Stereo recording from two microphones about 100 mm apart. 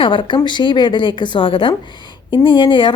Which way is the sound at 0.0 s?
55° left (ahead or behind).